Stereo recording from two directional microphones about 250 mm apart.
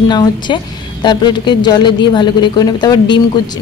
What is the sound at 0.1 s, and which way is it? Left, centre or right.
Speech, centre.